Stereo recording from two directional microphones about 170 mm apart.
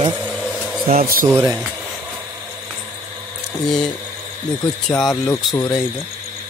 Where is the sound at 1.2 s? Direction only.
10° right (ahead or behind).